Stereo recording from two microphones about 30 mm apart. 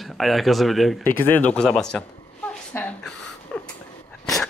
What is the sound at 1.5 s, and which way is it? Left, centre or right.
Speech, left.